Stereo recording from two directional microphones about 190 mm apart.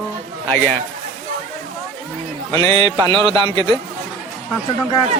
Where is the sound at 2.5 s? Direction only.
15° left (ahead or behind).